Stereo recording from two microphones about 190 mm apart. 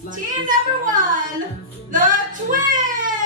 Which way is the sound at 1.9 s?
45° right (ahead or behind).